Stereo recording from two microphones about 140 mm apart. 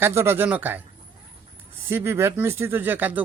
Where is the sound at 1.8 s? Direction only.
15° right (ahead or behind).